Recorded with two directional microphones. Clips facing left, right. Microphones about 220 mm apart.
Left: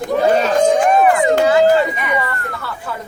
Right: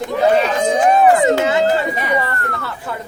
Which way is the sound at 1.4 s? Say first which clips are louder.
Left 4 dB; 20° right (ahead or behind).